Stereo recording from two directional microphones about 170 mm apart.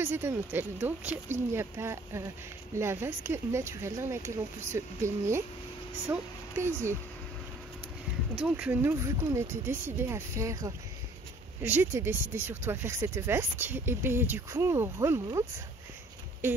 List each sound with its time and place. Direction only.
0.0 s a woman's voice: 15° right (ahead or behind)
8.4 s speech: 5° right (ahead or behind)